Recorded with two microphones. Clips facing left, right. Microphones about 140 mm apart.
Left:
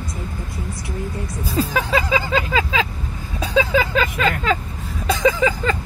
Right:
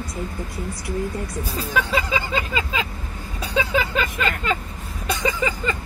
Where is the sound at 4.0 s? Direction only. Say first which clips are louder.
Left 4 dB; 90° left.